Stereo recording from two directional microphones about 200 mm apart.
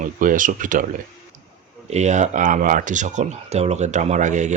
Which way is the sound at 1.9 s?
35° right (ahead or behind).